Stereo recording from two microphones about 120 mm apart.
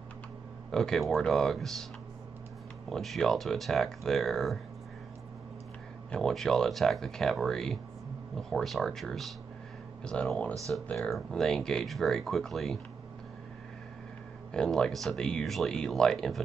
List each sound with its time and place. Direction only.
0.7 s speech: 5° left (ahead or behind)
2.9 s speech: centre (ahead or behind)
6.1 s speech: 5° left (ahead or behind)
14.5 s speech: 5° left (ahead or behind)